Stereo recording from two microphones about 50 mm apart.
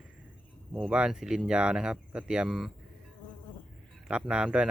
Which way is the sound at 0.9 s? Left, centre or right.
Centre.